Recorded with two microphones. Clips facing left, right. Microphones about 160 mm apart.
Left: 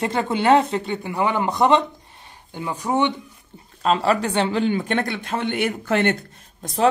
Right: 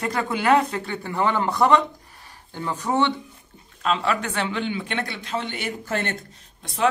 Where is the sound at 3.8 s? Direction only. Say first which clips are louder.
Left 4 dB; 40° left (ahead or behind); by 6.1 s 65° left (ahead or behind).